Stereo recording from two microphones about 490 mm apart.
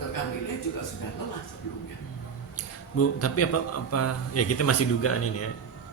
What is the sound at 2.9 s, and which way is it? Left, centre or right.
A man's voice, left.